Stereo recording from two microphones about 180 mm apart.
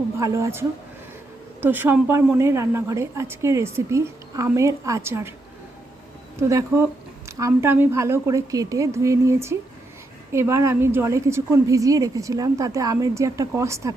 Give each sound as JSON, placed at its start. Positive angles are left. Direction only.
{"t": 0.2, "sound": "a woman's voice", "side_deg": -15}
{"t": 1.6, "sound": "a woman's voice", "side_deg": -10}
{"t": 6.5, "sound": "a woman's voice", "side_deg": -15}